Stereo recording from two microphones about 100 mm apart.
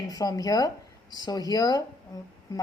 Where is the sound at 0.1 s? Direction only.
40° left (ahead or behind).